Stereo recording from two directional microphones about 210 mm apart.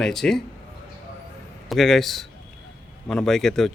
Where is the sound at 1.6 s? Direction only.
Centre (ahead or behind).